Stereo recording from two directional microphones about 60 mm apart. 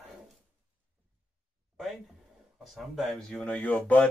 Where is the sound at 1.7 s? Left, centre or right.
Centre.